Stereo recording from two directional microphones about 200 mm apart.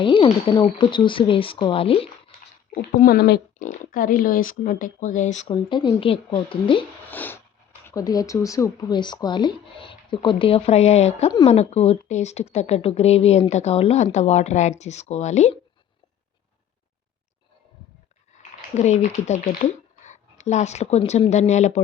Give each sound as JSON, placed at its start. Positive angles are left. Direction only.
{"t": 0.0, "sound": "speech", "side_deg": 25}
{"t": 2.7, "sound": "speech", "side_deg": 45}
{"t": 7.1, "sound": "a sound", "side_deg": 10}
{"t": 7.9, "sound": "speech", "side_deg": 20}
{"t": 18.8, "sound": "speech", "side_deg": 35}